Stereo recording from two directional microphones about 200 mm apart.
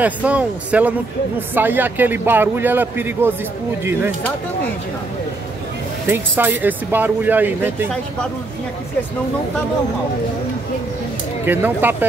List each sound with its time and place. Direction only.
0.0 s a man's voice: 5° right (ahead or behind)
6.0 s a man's voice: 10° right (ahead or behind)
11.4 s a man's voice: 10° right (ahead or behind)